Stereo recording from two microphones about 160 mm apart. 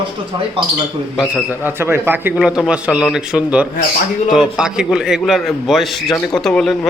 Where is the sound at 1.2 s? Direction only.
10° right (ahead or behind).